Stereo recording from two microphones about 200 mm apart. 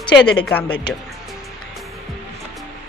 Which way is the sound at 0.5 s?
10° left (ahead or behind).